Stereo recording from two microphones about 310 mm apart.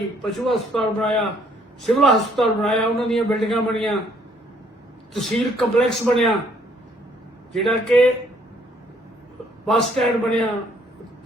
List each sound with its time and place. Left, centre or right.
0.2 s a man's voice: centre
5.1 s a man's voice: centre
7.5 s a man's voice: centre
9.6 s a man's voice: centre